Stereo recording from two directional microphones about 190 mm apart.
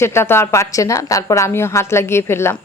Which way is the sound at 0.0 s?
15° left (ahead or behind).